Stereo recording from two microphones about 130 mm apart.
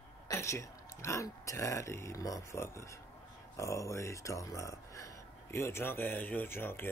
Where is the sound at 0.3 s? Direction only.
20° left (ahead or behind).